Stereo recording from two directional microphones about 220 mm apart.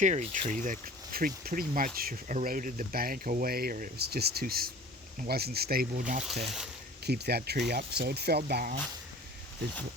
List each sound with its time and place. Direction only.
0.0 s speech: 35° right (ahead or behind)
7.0 s speech: 45° right (ahead or behind)